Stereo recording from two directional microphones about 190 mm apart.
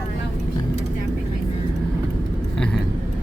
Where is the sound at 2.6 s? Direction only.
5° left (ahead or behind).